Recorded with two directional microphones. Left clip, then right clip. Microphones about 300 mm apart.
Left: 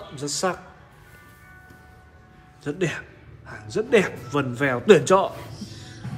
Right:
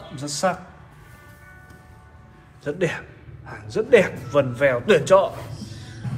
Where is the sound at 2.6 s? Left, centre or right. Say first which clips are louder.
Right 3 dB; centre.